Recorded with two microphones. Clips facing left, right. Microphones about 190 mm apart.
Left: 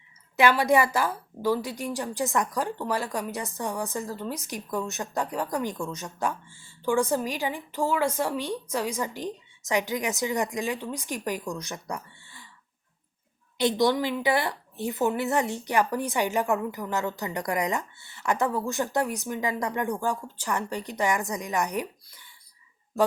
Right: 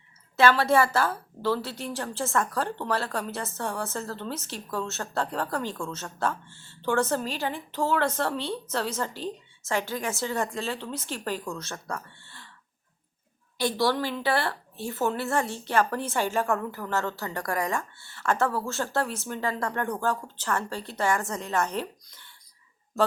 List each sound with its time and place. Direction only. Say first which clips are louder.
0.3 s a woman's voice: even; 15° left (ahead or behind)
13.6 s a woman's voice: left 2 dB; 20° left (ahead or behind)